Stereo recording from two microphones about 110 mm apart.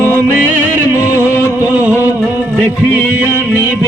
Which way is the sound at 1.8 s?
15° right (ahead or behind).